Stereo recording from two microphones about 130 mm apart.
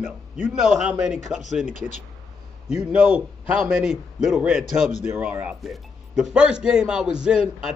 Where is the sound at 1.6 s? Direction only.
65° left (ahead or behind).